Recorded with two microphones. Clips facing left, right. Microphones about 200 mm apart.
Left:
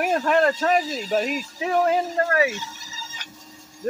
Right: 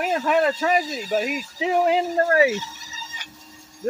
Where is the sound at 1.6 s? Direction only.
15° right (ahead or behind).